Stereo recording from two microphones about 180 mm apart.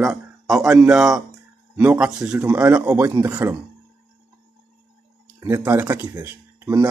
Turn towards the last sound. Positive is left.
turn(degrees=-15)  # may be behind; listen again after turning